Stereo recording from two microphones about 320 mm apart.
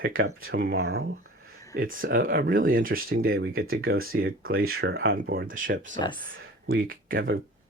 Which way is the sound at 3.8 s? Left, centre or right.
Right.